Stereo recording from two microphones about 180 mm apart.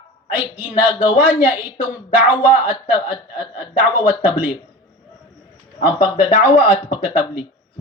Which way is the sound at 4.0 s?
30° left (ahead or behind).